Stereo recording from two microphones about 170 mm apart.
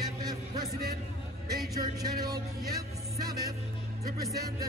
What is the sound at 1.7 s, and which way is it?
Music, 20° right (ahead or behind).